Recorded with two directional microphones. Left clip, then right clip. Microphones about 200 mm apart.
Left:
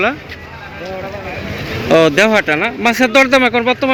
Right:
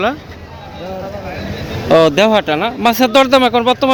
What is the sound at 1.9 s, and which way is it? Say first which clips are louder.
Speech: right 1 dB; 5° right (ahead or behind).